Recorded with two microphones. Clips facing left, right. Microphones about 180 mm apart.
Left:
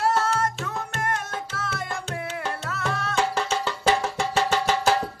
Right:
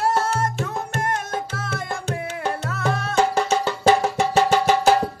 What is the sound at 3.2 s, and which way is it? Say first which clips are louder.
Music: right 6 dB; 45° right (ahead or behind).